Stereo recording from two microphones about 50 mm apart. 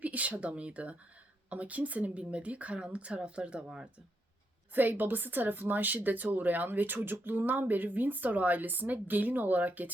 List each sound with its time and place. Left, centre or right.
0.0 s a woman's voice: right
4.7 s speech: right